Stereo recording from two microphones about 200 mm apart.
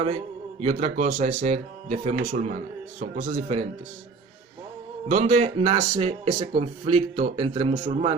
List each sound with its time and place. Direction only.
0.6 s speech: 35° right (ahead or behind)
5.0 s speech: 35° right (ahead or behind)